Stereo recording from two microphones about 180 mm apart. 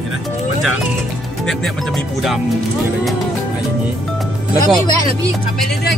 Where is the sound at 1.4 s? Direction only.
Centre (ahead or behind).